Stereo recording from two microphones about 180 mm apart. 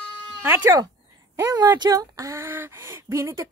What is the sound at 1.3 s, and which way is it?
Speech, 15° right (ahead or behind).